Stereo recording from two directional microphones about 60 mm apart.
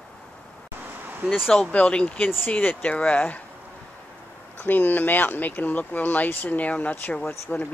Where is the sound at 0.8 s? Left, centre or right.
Right.